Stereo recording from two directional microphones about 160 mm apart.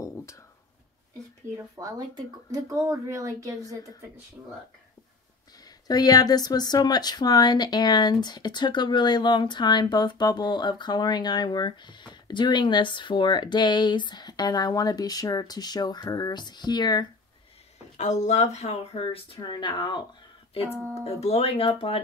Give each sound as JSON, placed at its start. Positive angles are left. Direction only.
{"t": 0.0, "sound": "a sound", "side_deg": 20}
{"t": 1.8, "sound": "speech", "side_deg": -25}
{"t": 5.9, "sound": "speech", "side_deg": 25}
{"t": 17.9, "sound": "speech", "side_deg": 45}
{"t": 21.0, "sound": "speech", "side_deg": 40}